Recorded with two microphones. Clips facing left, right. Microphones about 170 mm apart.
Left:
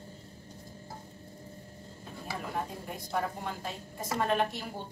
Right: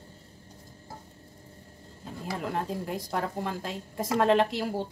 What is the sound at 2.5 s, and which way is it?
A woman's voice, 90° right.